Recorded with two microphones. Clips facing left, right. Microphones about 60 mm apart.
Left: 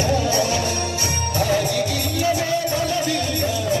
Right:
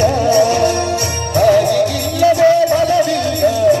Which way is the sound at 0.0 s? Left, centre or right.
Right.